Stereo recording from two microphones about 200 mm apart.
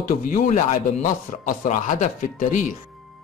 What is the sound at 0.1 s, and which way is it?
Speech, 45° left (ahead or behind).